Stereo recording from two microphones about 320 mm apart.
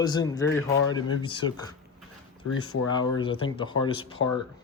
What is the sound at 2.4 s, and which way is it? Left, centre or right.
Speech, left.